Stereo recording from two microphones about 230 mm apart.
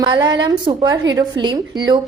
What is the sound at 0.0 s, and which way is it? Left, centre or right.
A woman's voice, centre.